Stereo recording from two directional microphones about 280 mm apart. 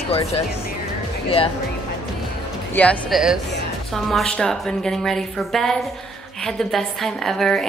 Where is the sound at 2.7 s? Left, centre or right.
Centre.